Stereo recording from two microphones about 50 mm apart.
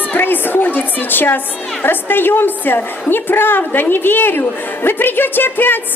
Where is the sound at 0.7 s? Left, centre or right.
Left.